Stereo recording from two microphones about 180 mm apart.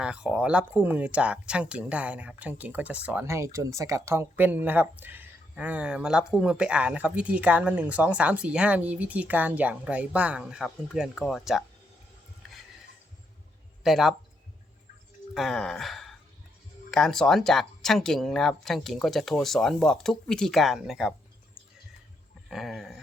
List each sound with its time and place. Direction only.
0.0 s speech: 5° right (ahead or behind)
13.8 s speech: centre (ahead or behind)
15.4 s gasp: centre (ahead or behind)
16.9 s speech: centre (ahead or behind)
22.4 s speech: centre (ahead or behind)